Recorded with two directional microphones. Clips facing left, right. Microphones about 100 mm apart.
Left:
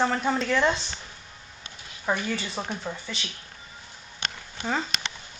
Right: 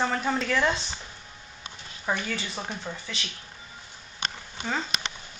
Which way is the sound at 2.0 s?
Centre (ahead or behind).